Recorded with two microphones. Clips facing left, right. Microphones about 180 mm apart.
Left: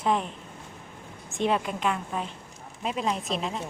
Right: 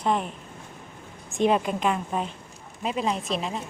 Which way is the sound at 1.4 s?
20° right (ahead or behind).